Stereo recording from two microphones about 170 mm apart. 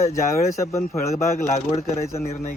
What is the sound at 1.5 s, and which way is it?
Speech, 40° left (ahead or behind).